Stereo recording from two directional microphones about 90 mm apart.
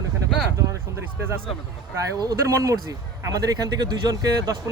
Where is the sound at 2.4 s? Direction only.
40° right (ahead or behind).